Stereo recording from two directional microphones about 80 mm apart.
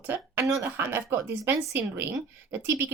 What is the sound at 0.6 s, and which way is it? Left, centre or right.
A woman's voice, right.